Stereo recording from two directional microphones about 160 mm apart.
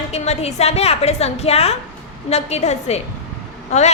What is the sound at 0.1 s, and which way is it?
A woman's voice, 40° left (ahead or behind).